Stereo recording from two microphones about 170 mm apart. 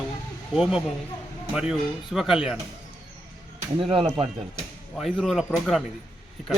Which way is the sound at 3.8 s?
30° right (ahead or behind).